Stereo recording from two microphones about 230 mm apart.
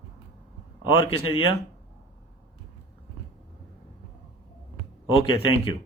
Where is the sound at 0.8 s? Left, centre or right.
Left.